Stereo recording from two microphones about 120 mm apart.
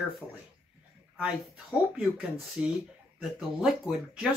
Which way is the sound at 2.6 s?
10° right (ahead or behind).